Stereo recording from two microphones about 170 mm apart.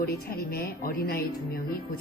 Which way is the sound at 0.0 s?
65° left (ahead or behind).